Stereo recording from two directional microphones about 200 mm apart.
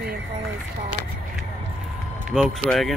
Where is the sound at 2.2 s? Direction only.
Centre (ahead or behind).